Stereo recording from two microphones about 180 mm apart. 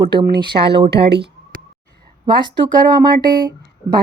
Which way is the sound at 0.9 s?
65° right (ahead or behind).